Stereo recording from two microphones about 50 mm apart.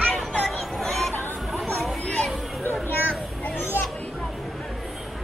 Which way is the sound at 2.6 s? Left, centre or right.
Left.